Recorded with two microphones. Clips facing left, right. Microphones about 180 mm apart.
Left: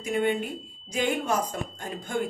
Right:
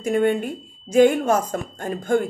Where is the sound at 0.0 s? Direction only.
50° right (ahead or behind).